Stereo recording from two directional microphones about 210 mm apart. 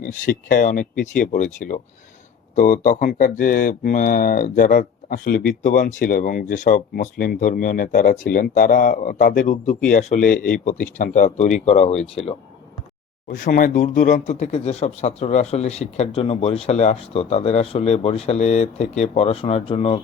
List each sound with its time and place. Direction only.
0.0 s speech: 40° left (ahead or behind)